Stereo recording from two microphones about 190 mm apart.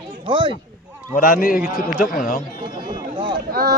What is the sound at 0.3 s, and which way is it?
Speech, 25° right (ahead or behind).